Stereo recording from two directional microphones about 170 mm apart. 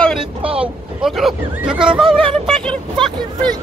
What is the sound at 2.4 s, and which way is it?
Vehicle, 5° left (ahead or behind).